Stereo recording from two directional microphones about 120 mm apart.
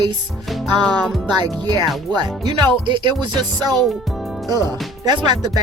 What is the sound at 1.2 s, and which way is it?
Speech, 35° right (ahead or behind).